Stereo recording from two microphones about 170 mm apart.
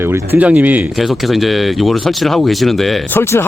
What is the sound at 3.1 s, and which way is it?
Speech, 15° left (ahead or behind).